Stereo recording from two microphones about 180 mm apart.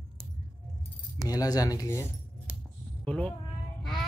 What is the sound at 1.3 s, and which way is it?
Speech, 20° left (ahead or behind).